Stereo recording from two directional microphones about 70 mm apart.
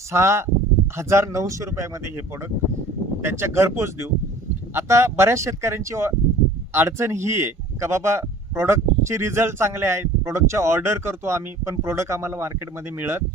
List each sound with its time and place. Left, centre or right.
0.1 s a man's voice: right